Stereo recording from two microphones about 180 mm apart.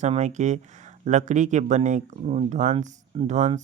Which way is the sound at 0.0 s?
40° right (ahead or behind).